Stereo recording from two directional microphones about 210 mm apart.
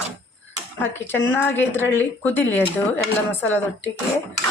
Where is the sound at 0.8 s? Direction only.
10° left (ahead or behind).